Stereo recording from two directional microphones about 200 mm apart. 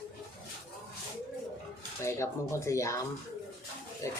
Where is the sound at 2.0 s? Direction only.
15° left (ahead or behind).